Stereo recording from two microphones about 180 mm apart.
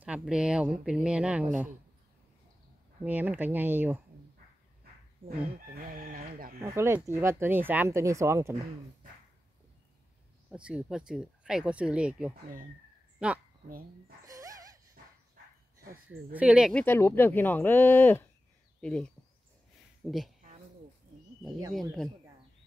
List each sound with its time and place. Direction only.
0.0 s speech: 5° right (ahead or behind)
3.0 s speech: 10° right (ahead or behind)
5.8 s chicken: 50° right (ahead or behind)
6.6 s speech: 15° right (ahead or behind)
10.5 s speech: 5° right (ahead or behind)
13.7 s chicken: 55° right (ahead or behind)
14.2 s a sound: 20° right (ahead or behind)
16.3 s speech: 5° right (ahead or behind)
16.7 s speech: 10° left (ahead or behind)
21.7 s speech: centre (ahead or behind)